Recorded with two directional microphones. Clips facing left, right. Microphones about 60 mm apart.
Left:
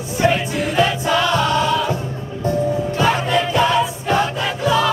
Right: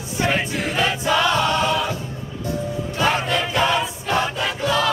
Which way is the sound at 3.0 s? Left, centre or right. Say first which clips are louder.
Left 2 dB; centre.